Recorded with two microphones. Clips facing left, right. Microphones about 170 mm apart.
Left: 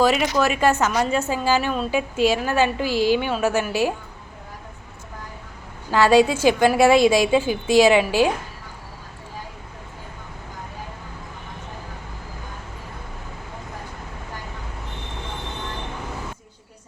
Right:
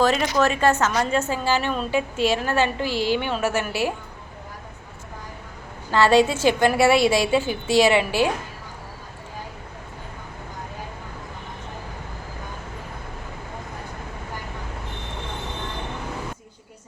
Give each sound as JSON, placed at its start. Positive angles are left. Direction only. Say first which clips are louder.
{"t": 0.0, "sound": "a woman's voice", "louder": "left 1 dB", "side_deg": 10}
{"t": 5.9, "sound": "a woman's voice", "louder": "left 1 dB", "side_deg": 10}